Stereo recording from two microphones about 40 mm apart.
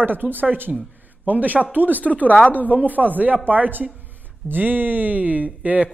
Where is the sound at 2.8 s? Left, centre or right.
Right.